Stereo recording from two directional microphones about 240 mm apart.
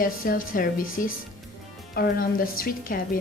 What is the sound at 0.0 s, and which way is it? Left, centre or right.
Speech, left.